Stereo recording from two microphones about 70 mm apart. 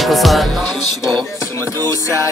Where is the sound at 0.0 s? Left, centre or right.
Centre.